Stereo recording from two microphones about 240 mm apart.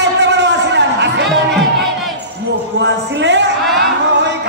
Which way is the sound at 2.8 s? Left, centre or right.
Right.